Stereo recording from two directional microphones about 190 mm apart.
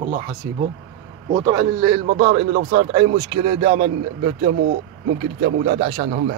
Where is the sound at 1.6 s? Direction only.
20° right (ahead or behind).